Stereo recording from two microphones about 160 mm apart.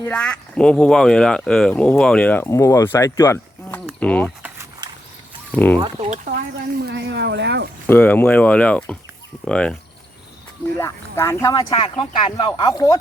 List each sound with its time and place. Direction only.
0.0 s speech: 5° left (ahead or behind)
5.5 s speech: 10° left (ahead or behind)
6.2 s speech: 80° right
7.9 s speech: 10° left (ahead or behind)
10.8 s speech: 20° left (ahead or behind)